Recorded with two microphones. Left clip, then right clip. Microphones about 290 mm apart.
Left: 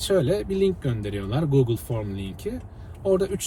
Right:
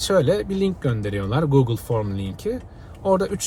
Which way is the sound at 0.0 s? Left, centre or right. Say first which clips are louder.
Right 4 dB; centre.